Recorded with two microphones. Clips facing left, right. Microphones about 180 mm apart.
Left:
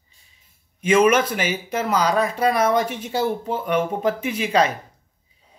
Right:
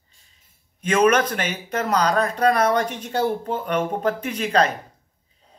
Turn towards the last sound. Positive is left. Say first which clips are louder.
# left 1 dB
turn(degrees=10)  # may be behind; listen again after turning